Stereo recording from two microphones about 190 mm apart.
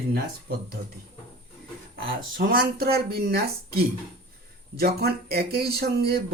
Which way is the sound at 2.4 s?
55° right (ahead or behind).